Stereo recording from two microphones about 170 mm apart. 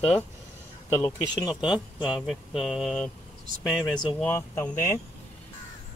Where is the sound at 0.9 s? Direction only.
20° left (ahead or behind).